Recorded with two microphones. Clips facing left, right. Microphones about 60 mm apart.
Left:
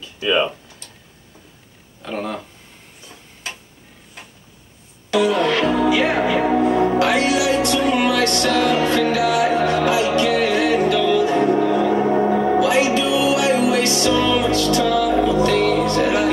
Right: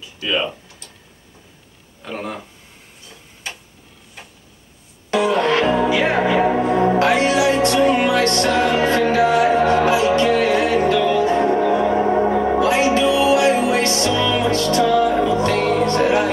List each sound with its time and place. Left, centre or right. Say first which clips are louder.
0.2 s speech: left 3 dB; centre
2.0 s speech: left 2 dB; centre
5.1 s music: even; right
12.2 s music: even; centre
12.5 s music: even; right